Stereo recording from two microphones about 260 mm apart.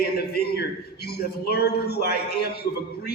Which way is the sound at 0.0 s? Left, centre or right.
Left.